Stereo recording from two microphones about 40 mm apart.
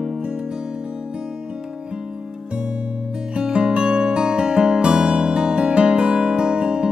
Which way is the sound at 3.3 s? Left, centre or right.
Right.